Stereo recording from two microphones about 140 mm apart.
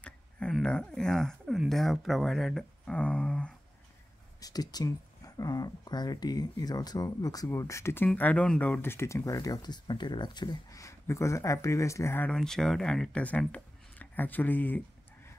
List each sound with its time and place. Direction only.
0.0 s speech: 5° left (ahead or behind)
4.4 s speech: 25° left (ahead or behind)
12.3 s speech: 5° left (ahead or behind)